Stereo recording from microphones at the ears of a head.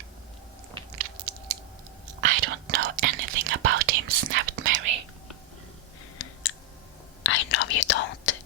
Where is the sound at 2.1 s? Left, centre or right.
Right.